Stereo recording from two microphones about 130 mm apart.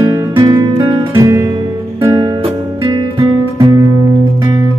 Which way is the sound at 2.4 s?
40° right (ahead or behind).